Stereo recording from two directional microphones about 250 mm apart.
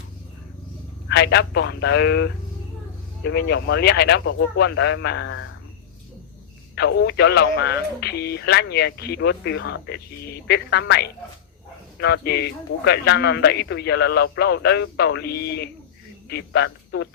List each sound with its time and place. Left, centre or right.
1.0 s speech: left
6.7 s speech: left